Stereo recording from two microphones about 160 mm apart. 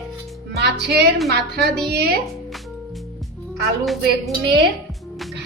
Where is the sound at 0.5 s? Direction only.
90° right.